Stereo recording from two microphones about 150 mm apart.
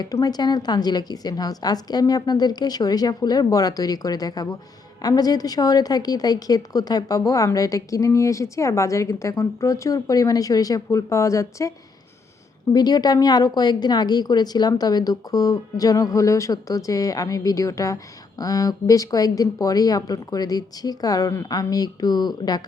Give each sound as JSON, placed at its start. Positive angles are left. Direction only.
{"t": 0.0, "sound": "a woman's voice", "side_deg": 25}
{"t": 12.7, "sound": "a woman's voice", "side_deg": 25}